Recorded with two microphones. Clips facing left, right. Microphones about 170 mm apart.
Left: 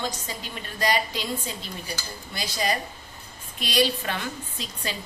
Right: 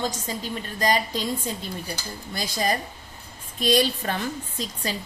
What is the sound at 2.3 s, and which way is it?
A woman's voice, 45° right (ahead or behind).